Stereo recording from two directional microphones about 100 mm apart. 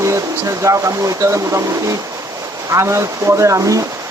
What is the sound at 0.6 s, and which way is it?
Speech, 30° right (ahead or behind).